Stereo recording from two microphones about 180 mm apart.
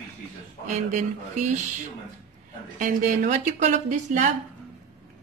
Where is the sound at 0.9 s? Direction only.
40° right (ahead or behind).